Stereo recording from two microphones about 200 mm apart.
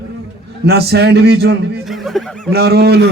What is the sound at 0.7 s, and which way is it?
A man's voice, 55° right (ahead or behind).